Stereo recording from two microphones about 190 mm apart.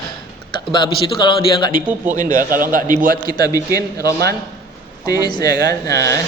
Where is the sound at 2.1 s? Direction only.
45° right (ahead or behind).